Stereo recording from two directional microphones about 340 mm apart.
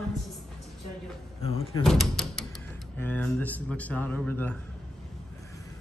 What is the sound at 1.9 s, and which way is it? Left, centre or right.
A man's voice, centre.